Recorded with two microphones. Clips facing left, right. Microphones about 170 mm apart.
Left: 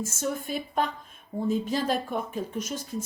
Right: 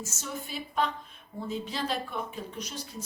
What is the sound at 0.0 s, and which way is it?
Speech, 50° left (ahead or behind).